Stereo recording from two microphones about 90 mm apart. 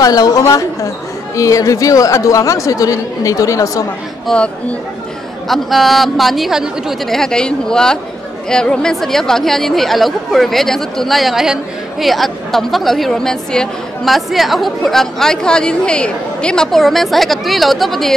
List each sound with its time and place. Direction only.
0.0 s a woman's voice: 45° left (ahead or behind)
4.3 s speech: 5° left (ahead or behind)
5.5 s speech: centre (ahead or behind)